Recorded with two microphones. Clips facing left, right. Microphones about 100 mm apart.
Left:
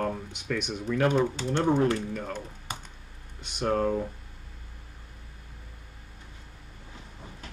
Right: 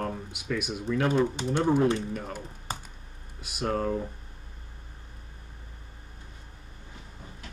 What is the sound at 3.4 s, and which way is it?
Speech, 5° right (ahead or behind).